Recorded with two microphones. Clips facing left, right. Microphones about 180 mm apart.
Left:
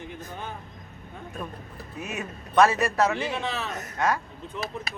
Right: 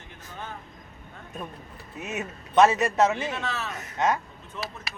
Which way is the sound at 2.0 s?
20° right (ahead or behind).